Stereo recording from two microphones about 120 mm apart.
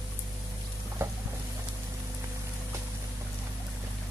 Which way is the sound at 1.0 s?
20° right (ahead or behind).